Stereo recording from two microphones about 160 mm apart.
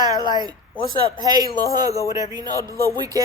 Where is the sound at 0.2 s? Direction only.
25° left (ahead or behind).